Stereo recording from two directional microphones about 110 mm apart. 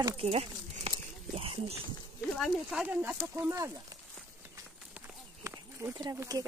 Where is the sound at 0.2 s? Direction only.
65° right (ahead or behind).